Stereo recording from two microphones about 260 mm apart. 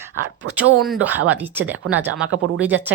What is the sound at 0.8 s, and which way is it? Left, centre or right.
A woman's voice, centre.